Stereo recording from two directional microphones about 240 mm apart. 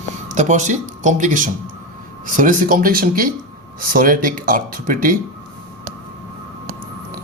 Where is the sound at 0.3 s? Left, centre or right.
Right.